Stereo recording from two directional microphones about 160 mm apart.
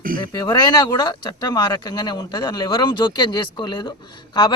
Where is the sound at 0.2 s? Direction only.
25° left (ahead or behind).